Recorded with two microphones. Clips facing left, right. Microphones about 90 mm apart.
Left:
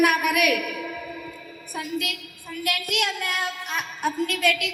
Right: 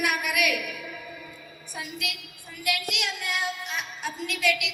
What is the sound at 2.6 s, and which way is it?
A woman's voice, 50° left (ahead or behind).